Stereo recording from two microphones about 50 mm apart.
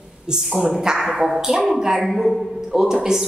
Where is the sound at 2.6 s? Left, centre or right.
Centre.